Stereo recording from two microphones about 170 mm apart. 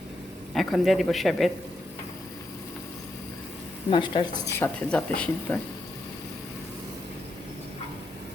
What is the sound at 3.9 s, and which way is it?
Speech, 30° left (ahead or behind).